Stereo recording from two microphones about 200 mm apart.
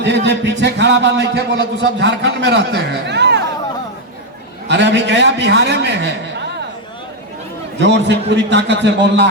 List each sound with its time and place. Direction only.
0.0 s a man's voice: 60° right (ahead or behind)
4.7 s a man's voice: 60° right (ahead or behind)
7.8 s a man's voice: 60° right (ahead or behind)